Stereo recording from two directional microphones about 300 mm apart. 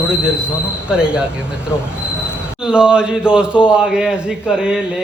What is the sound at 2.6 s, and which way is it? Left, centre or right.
A man's voice, centre.